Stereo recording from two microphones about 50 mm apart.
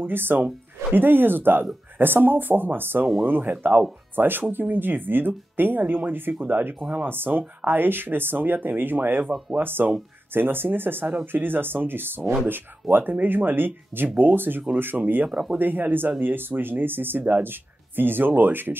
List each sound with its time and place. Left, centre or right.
0.0 s speech: right
15.2 s speech: centre
15.6 s speech: right